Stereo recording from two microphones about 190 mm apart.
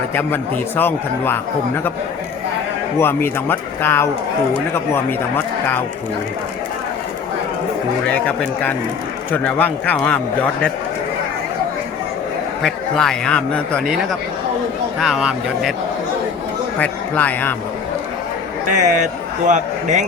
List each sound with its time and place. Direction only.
0.1 s speech: 10° left (ahead or behind)
3.0 s speech: 10° left (ahead or behind)
8.0 s speech: 5° left (ahead or behind)
12.6 s a man's voice: 5° left (ahead or behind)
16.7 s speech: 5° left (ahead or behind)
18.7 s a man's voice: 40° right (ahead or behind)